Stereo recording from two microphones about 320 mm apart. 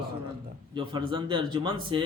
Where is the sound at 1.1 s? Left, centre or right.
Centre.